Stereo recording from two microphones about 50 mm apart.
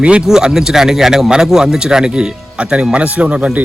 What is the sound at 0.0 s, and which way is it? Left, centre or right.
Speech, right.